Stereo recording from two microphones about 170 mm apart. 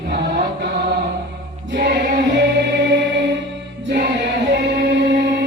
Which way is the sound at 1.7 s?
80° right.